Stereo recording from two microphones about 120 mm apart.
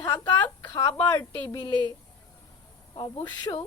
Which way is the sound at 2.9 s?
40° left (ahead or behind).